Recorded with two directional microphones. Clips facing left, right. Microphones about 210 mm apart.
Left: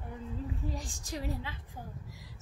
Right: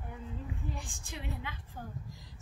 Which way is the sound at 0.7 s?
40° left (ahead or behind).